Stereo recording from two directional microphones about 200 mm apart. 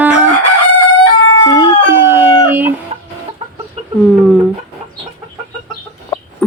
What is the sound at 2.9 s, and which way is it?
Chicken, 30° right (ahead or behind).